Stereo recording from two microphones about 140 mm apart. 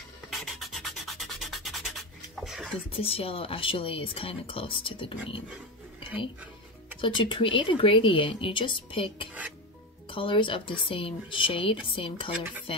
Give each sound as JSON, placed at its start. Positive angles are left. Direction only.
{"t": 0.3, "sound": "rub", "side_deg": 0}
{"t": 2.9, "sound": "speech", "side_deg": 45}
{"t": 7.0, "sound": "speech", "side_deg": 35}